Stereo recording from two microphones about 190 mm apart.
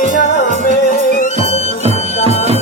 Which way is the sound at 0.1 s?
40° left (ahead or behind).